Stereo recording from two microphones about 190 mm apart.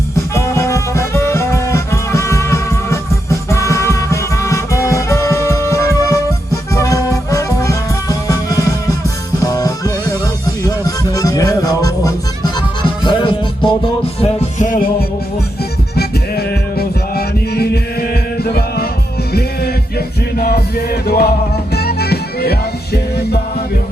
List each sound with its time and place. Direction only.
0.3 s music: 15° left (ahead or behind)
14.2 s music: 40° left (ahead or behind)
16.0 s music: 55° left (ahead or behind)